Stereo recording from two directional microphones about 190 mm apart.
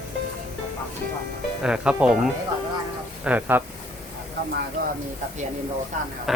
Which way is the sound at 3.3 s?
10° right (ahead or behind).